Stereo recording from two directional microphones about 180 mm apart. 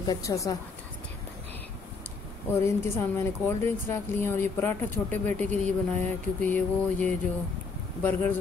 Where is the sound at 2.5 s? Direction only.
15° left (ahead or behind).